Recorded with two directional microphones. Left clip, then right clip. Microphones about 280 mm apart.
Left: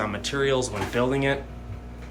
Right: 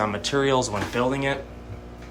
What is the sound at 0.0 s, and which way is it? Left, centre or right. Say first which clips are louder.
Speech: right 3 dB; centre.